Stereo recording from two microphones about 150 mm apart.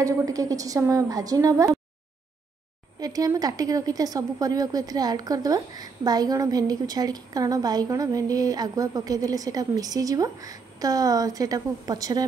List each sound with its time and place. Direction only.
0.0 s a woman's voice: 20° right (ahead or behind)
3.0 s a woman's voice: 25° right (ahead or behind)